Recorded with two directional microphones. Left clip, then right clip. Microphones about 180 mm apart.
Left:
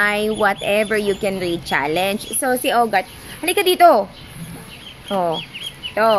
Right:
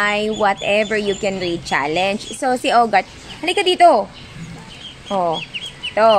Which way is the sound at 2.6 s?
25° right (ahead or behind).